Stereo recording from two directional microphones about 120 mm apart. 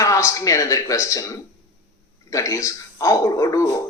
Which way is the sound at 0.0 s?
25° left (ahead or behind).